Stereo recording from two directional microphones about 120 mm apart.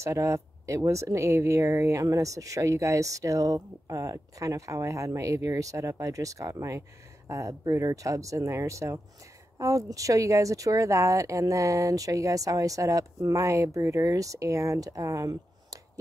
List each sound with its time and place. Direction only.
0.0 s speech: 25° right (ahead or behind)